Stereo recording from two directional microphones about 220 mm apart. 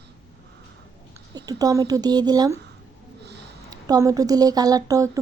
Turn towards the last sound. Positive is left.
turn(degrees=-15)  # may be behind; listen again after turning